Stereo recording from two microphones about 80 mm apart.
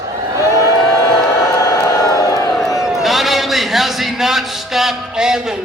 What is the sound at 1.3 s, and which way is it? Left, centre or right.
Crowd, left.